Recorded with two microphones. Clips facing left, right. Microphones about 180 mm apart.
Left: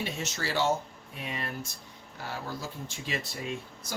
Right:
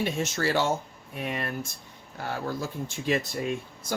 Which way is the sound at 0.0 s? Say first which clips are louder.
Right 7 dB; 50° right (ahead or behind).